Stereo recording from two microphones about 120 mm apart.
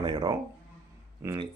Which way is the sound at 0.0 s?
40° right (ahead or behind).